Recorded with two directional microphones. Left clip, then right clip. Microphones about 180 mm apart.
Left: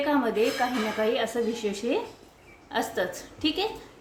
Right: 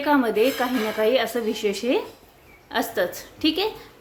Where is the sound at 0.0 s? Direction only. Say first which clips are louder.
Right 5 dB; 30° right (ahead or behind).